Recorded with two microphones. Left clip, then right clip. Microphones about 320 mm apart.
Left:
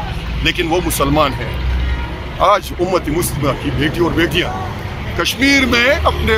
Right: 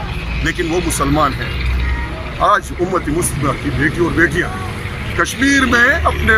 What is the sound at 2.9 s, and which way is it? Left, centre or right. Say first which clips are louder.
Speech: left 2 dB; centre.